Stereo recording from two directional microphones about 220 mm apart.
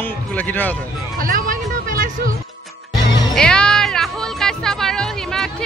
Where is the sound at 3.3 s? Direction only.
5° left (ahead or behind).